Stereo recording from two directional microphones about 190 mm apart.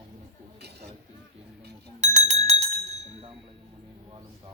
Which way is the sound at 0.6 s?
60° right (ahead or behind).